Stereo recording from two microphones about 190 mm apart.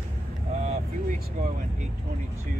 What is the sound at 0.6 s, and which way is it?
Vehicle, 40° right (ahead or behind).